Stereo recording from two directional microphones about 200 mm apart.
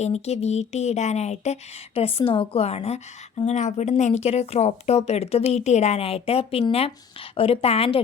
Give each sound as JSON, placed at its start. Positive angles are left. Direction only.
{"t": 0.0, "sound": "a woman's voice", "side_deg": 35}